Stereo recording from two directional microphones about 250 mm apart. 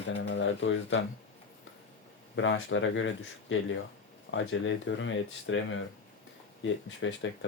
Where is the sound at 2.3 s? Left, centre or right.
Left.